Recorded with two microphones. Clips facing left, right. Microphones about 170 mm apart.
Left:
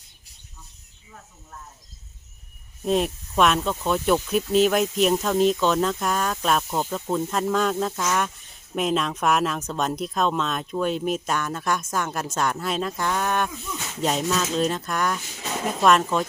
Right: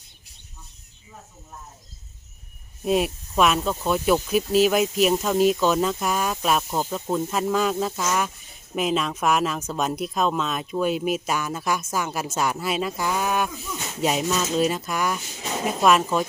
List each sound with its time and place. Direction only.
2.8 s speech: 5° right (ahead or behind)